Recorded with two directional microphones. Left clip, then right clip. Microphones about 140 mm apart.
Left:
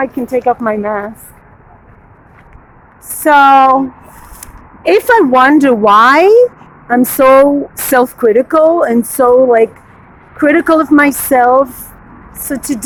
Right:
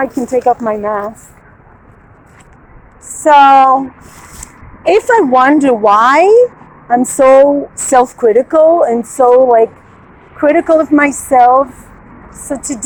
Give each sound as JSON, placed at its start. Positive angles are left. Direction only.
{"t": 0.0, "sound": "speech", "side_deg": 10}
{"t": 0.5, "sound": "speech", "side_deg": 20}
{"t": 3.2, "sound": "speech", "side_deg": 35}
{"t": 7.9, "sound": "speech", "side_deg": 30}